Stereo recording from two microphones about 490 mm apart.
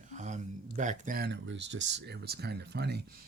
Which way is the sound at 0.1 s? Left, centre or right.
Centre.